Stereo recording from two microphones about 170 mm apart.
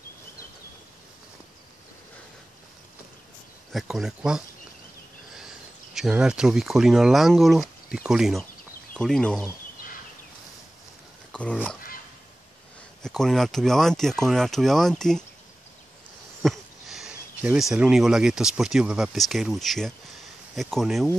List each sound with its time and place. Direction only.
3.7 s speech: centre (ahead or behind)
13.0 s speech: centre (ahead or behind)
16.4 s speech: centre (ahead or behind)